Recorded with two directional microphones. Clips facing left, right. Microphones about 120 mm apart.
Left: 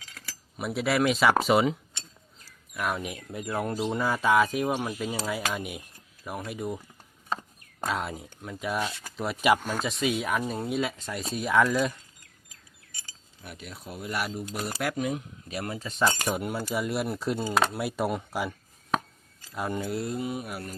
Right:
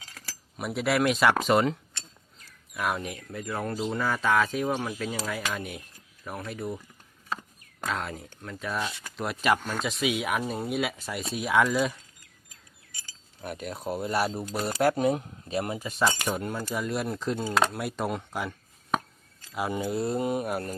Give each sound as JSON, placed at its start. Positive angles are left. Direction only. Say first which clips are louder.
{"t": 0.5, "sound": "speech", "louder": "even", "side_deg": 0}
{"t": 1.9, "sound": "a sound", "louder": "even", "side_deg": 15}
{"t": 2.7, "sound": "speech", "louder": "right 1 dB", "side_deg": 0}
{"t": 3.0, "sound": "speech", "louder": "even", "side_deg": 15}
{"t": 7.9, "sound": "speech", "louder": "left 1 dB", "side_deg": 10}
{"t": 9.1, "sound": "speech", "louder": "left 1 dB", "side_deg": 0}
{"t": 9.4, "sound": "speech", "louder": "left 2 dB", "side_deg": 10}
{"t": 9.8, "sound": "speech", "louder": "even", "side_deg": 0}
{"t": 13.4, "sound": "speech", "louder": "right 8 dB", "side_deg": -45}
{"t": 15.9, "sound": "speech", "louder": "left 1 dB", "side_deg": -5}
{"t": 16.2, "sound": "speech", "louder": "left 1 dB", "side_deg": 10}
{"t": 20.1, "sound": "speech", "louder": "right 5 dB", "side_deg": -50}